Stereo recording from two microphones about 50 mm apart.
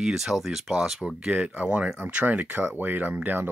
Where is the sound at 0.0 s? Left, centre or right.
Centre.